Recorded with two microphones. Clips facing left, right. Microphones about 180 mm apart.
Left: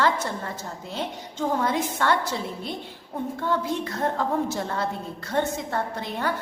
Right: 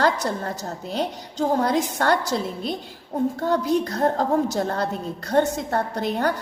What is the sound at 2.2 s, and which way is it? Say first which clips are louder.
Speech: right 4 dB; 90° right.